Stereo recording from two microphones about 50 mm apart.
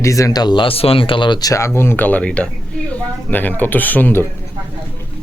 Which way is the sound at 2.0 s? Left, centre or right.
Left.